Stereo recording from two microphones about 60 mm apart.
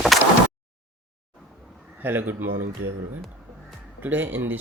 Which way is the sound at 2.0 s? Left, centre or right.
Right.